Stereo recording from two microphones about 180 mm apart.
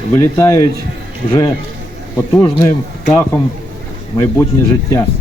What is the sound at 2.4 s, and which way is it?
Speech, 20° left (ahead or behind).